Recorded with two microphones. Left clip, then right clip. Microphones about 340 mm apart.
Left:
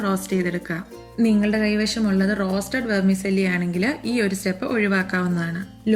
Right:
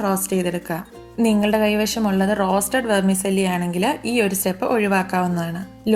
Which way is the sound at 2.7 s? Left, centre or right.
Right.